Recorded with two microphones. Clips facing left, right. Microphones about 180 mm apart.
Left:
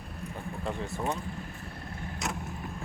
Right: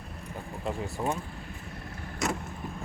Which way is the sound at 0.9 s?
15° right (ahead or behind).